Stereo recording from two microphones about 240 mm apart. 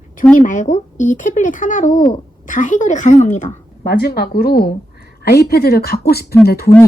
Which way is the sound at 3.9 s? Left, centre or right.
Left.